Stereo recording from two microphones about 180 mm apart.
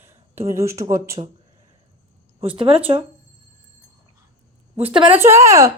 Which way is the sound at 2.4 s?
30° right (ahead or behind).